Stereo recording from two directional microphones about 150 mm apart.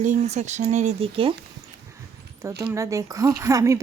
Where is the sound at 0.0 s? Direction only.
50° right (ahead or behind).